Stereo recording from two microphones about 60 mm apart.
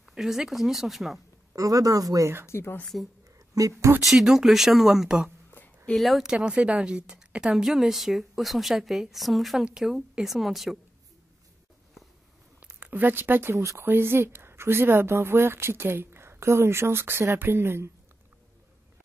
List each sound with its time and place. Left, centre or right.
0.1 s a woman's voice: centre
1.5 s speech: right
2.4 s speech: left
3.5 s speech: right
4.0 s a woman's voice: centre
5.9 s a woman's voice: centre
6.2 s a woman's voice: centre
12.8 s speech: right
13.6 s speech: right
13.8 s speech: right